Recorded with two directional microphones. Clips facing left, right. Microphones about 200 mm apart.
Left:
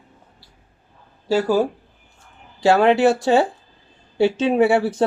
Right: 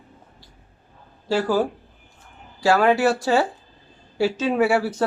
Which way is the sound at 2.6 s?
25° left (ahead or behind).